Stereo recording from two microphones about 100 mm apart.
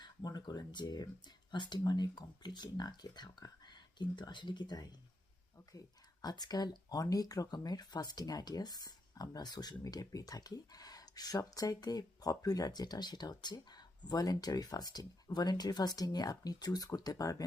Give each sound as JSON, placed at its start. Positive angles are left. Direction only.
{"t": 0.0, "sound": "speech", "side_deg": 45}
{"t": 6.2, "sound": "speech", "side_deg": 45}